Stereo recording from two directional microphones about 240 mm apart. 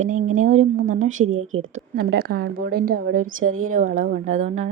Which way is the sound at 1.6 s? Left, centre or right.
Right.